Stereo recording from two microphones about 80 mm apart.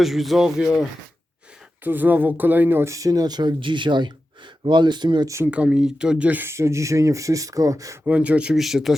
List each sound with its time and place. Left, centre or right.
0.0 s speech: centre
1.8 s speech: right
2.9 s speech: right
5.2 s speech: right
5.5 s speech: centre
6.4 s speech: right
8.0 s speech: centre
8.5 s speech: centre